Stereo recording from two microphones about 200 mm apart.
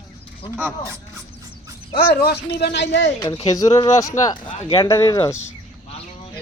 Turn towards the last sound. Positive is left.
turn(degrees=20)  # may be behind; listen again after turning